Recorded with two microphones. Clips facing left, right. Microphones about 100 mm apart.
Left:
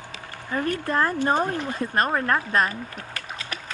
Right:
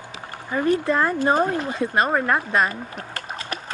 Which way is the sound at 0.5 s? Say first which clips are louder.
Right 4 dB; 20° right (ahead or behind).